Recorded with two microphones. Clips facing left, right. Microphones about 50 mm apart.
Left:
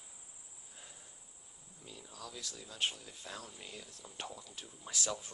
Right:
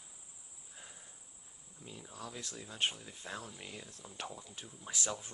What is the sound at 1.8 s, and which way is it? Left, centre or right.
Speech, right.